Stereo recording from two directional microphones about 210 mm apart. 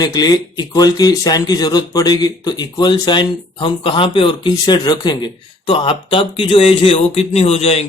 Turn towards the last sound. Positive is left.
turn(degrees=30)  # may be behind; listen again after turning